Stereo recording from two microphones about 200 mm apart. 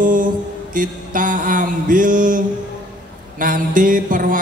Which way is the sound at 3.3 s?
45° right (ahead or behind).